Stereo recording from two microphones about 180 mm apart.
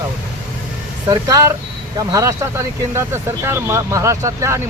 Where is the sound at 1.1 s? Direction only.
20° right (ahead or behind).